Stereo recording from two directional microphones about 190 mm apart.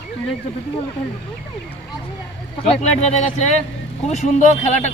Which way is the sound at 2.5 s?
35° left (ahead or behind).